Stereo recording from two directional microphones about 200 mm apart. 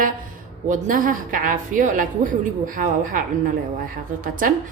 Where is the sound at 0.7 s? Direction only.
45° right (ahead or behind).